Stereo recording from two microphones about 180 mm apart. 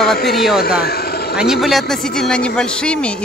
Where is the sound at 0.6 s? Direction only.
60° left (ahead or behind).